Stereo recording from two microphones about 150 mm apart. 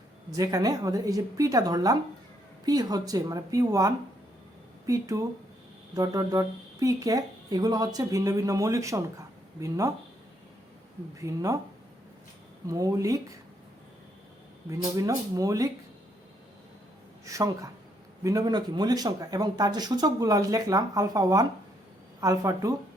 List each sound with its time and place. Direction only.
0.3 s speech: 25° right (ahead or behind)
11.2 s speech: 20° right (ahead or behind)
12.6 s speech: 20° right (ahead or behind)
14.7 s speech: 20° right (ahead or behind)
17.2 s speech: 20° right (ahead or behind)